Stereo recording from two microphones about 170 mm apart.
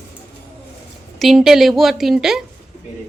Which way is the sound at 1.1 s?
Centre (ahead or behind).